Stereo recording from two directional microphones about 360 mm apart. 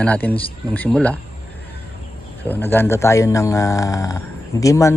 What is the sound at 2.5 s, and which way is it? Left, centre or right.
Speech, centre.